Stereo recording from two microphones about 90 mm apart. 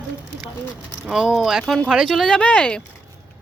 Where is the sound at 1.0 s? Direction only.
5° right (ahead or behind).